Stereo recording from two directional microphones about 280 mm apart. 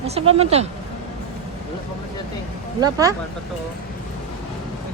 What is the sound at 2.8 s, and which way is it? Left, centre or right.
Speech, centre.